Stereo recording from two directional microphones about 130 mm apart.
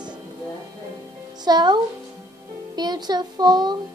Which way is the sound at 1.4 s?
35° right (ahead or behind).